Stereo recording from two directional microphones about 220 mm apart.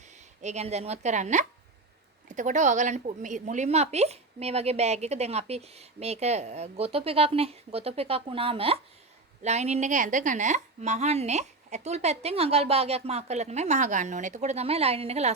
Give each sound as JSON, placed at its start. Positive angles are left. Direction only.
{"t": 0.4, "sound": "a woman's voice", "side_deg": -30}